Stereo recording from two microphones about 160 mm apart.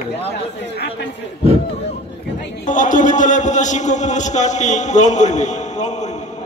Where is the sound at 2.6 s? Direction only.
55° left (ahead or behind).